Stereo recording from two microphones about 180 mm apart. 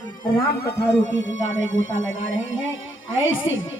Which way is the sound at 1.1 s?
90° left.